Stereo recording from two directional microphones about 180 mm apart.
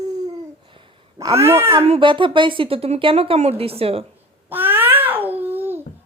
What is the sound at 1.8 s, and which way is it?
Speech, 30° right (ahead or behind).